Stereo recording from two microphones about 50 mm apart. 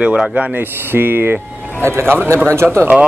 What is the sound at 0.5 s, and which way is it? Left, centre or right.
Speech, right.